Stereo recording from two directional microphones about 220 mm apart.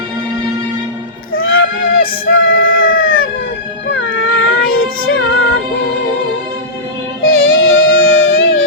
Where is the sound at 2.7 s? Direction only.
40° left (ahead or behind).